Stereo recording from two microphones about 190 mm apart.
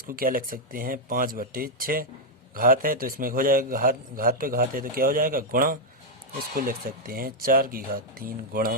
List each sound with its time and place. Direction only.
0.1 s a man's voice: 50° right (ahead or behind)